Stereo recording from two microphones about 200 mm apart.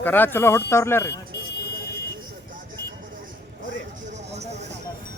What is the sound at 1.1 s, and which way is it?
Music, 55° left (ahead or behind).